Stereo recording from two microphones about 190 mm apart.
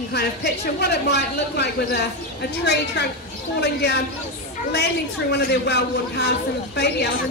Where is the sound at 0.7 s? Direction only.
60° left (ahead or behind).